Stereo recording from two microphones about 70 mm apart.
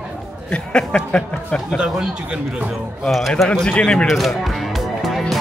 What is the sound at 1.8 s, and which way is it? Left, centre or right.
Speech, centre.